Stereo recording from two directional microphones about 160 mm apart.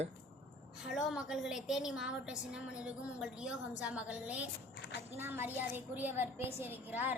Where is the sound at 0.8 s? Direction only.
5° right (ahead or behind).